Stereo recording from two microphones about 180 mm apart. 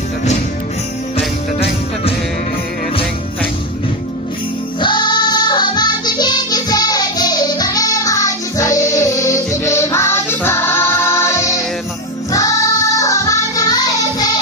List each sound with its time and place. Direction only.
1.1 s jingle bell: 35° left (ahead or behind)
4.7 s music: 25° left (ahead or behind)